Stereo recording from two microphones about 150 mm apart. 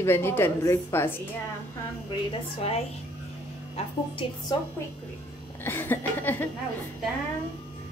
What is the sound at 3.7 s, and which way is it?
Speech, 35° left (ahead or behind).